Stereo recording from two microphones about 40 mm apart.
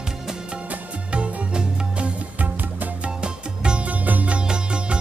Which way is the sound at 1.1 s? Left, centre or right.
Right.